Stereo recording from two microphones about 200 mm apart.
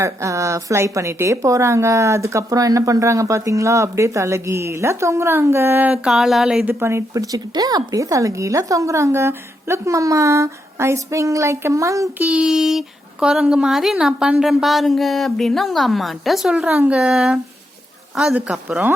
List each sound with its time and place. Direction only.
0.0 s a woman's voice: 15° right (ahead or behind)